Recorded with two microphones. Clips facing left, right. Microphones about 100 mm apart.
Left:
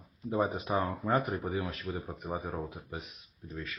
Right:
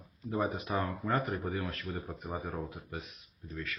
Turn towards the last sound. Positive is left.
turn(degrees=20)  # may be behind; listen again after turning